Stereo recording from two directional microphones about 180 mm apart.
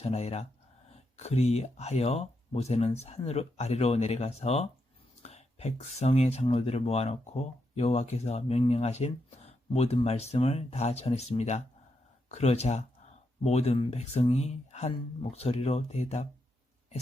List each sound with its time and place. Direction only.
0.0 s speech: 35° left (ahead or behind)